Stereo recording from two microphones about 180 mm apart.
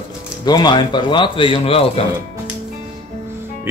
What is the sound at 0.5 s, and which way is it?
A man's voice, 25° left (ahead or behind).